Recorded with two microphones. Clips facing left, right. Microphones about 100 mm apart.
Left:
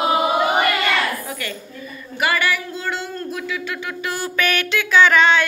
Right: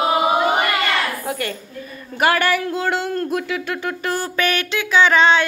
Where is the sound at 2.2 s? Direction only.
55° right (ahead or behind).